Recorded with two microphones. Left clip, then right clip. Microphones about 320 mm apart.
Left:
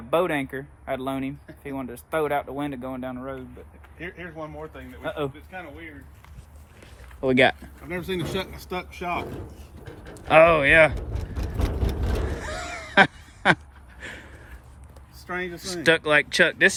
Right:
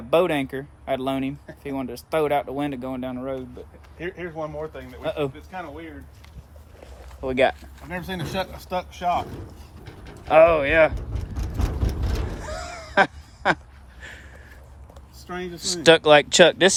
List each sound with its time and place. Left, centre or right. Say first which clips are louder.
0.1 s speech: right 3 dB; centre
3.9 s speech: right 5 dB; right
5.0 s speech: right 3 dB; centre
5.5 s speech: right 3 dB; centre
7.2 s speech: left 1 dB; left
7.9 s speech: even; centre
10.2 s speech: even; left
12.4 s duck: left 1 dB; left
14.0 s a sound: left 2 dB; centre
15.3 s speech: right 1 dB; centre